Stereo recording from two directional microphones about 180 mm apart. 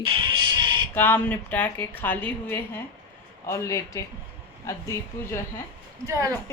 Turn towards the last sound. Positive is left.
turn(degrees=-20)  # may be behind; listen again after turning